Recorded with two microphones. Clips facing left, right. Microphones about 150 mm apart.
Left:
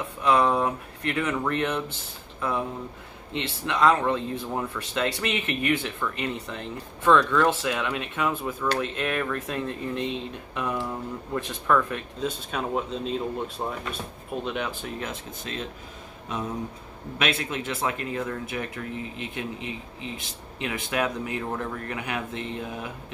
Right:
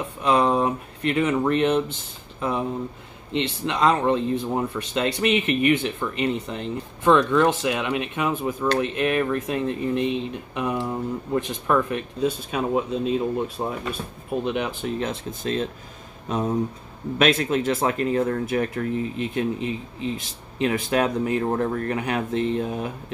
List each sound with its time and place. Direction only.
0.2 s speech: 20° right (ahead or behind)
15.0 s speech: 35° right (ahead or behind)